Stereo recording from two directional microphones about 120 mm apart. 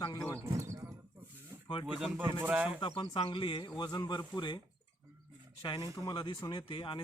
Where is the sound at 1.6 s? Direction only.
40° left (ahead or behind).